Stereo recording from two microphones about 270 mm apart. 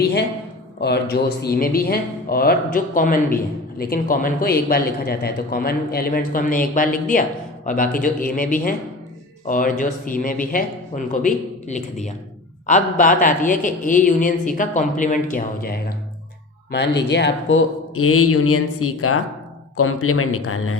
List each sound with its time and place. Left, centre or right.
0.8 s a man's voice: left